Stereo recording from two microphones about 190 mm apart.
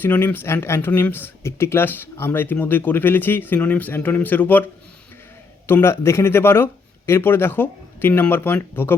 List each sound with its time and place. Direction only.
0.0 s speech: 10° left (ahead or behind)
5.6 s speech: 10° left (ahead or behind)